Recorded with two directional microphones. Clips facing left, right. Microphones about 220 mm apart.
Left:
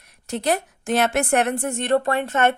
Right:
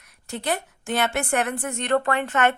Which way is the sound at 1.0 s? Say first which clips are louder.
Left 4 dB; 40° left (ahead or behind).